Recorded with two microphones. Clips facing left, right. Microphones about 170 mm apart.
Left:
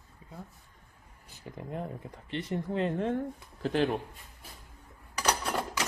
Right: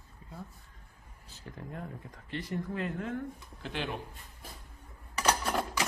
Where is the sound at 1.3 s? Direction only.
15° left (ahead or behind); by 3.9 s 40° left (ahead or behind).